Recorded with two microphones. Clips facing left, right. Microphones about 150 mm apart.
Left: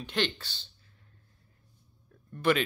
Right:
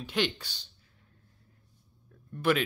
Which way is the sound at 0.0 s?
10° right (ahead or behind).